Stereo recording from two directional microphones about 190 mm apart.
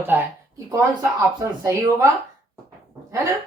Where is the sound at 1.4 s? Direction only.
15° right (ahead or behind).